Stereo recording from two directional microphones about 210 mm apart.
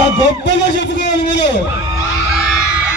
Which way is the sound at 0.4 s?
55° left (ahead or behind).